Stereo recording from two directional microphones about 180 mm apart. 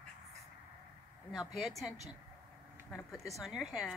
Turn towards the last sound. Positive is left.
turn(degrees=0)  # may be behind; listen again after turning